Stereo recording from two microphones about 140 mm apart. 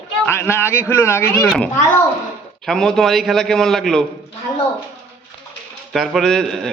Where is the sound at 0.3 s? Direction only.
15° left (ahead or behind).